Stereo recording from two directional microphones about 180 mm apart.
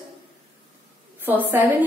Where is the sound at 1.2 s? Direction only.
10° right (ahead or behind).